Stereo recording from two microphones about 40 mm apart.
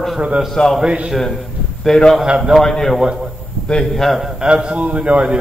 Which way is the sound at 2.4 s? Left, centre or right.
Centre.